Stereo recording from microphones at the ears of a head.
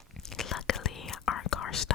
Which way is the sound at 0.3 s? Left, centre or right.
Left.